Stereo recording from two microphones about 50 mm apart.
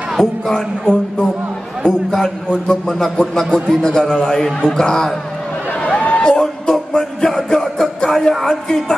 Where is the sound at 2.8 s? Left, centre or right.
Centre.